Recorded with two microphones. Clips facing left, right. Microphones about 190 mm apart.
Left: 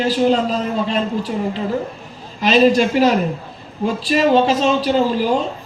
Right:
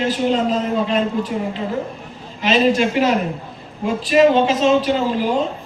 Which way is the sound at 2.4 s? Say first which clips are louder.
Left 3 dB; 35° left (ahead or behind).